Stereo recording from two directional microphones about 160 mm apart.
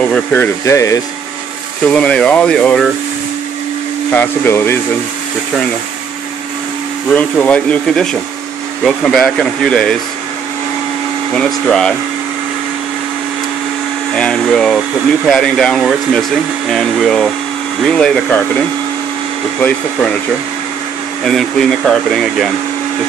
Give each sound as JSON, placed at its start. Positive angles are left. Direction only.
{"t": 0.0, "sound": "speech", "side_deg": 10}
{"t": 1.9, "sound": "speech", "side_deg": 5}
{"t": 4.1, "sound": "speech", "side_deg": 15}
{"t": 7.2, "sound": "speech", "side_deg": 5}
{"t": 11.3, "sound": "speech", "side_deg": 5}
{"t": 14.1, "sound": "speech", "side_deg": 5}
{"t": 19.6, "sound": "speech", "side_deg": 5}
{"t": 21.2, "sound": "speech", "side_deg": 5}